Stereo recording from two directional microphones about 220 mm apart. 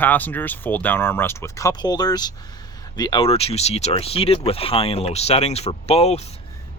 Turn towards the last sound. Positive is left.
turn(degrees=30)  # may be behind; listen again after turning